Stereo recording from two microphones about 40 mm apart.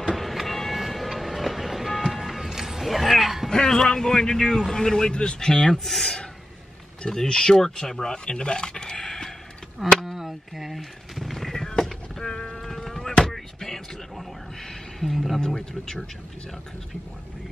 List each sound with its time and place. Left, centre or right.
0.1 s train: centre
2.0 s music: centre
3.4 s speech: centre
9.8 s speech: centre
10.1 s a sound: centre
15.1 s speech: centre
15.4 s speech: centre